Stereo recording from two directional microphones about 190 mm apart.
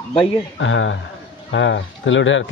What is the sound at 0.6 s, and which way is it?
Speech, 90° left.